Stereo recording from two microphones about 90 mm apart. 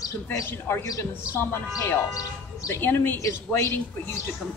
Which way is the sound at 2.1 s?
40° left (ahead or behind).